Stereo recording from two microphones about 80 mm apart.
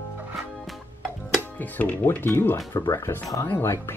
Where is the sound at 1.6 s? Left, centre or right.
Left.